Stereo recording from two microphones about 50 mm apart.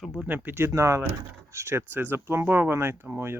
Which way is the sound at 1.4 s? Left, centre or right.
Right.